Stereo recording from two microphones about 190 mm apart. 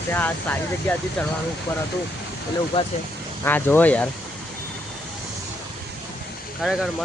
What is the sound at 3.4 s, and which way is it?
Speech, 10° left (ahead or behind).